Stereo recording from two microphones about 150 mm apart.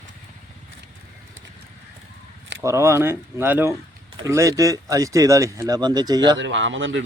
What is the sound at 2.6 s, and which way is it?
Speech, 20° right (ahead or behind).